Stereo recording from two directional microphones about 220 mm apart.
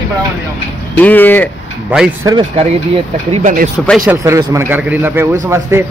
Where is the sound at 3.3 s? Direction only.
40° right (ahead or behind).